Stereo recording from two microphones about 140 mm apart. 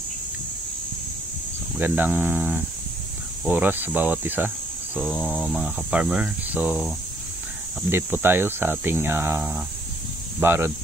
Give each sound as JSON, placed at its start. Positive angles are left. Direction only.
{"t": 1.8, "sound": "speech", "side_deg": -15}
{"t": 5.1, "sound": "a sound", "side_deg": 10}
{"t": 5.5, "sound": "speech", "side_deg": -5}
{"t": 7.9, "sound": "speech", "side_deg": -15}